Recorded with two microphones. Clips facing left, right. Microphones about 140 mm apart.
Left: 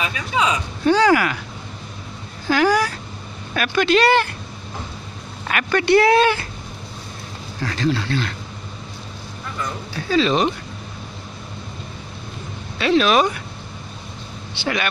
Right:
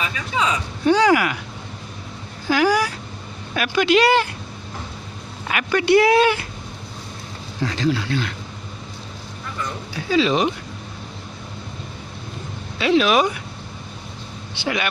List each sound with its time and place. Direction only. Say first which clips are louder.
0.0 s speech: left 2 dB; 15° left (ahead or behind)
0.8 s speech: even; 15° right (ahead or behind)
2.4 s speech: left 1 dB; 10° right (ahead or behind)
5.5 s speech: even; 15° right (ahead or behind)
7.6 s speech: even; 15° right (ahead or behind)
9.9 s speech: even; 15° right (ahead or behind)
12.7 s speech: even; 15° right (ahead or behind)
14.5 s speech: even; 15° right (ahead or behind)